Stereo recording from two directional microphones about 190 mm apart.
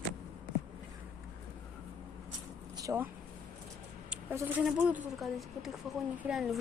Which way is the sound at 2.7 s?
15° right (ahead or behind).